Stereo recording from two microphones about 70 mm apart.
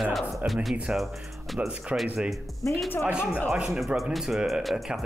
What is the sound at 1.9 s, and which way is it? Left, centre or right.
Speech, centre.